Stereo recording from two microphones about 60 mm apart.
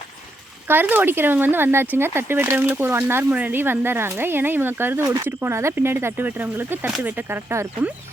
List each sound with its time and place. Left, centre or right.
0.7 s speech: right